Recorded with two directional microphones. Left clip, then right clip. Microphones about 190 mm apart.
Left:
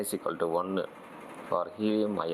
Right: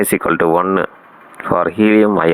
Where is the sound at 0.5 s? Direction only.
80° right.